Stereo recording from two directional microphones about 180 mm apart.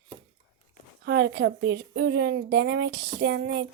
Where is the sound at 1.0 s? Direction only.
75° right (ahead or behind).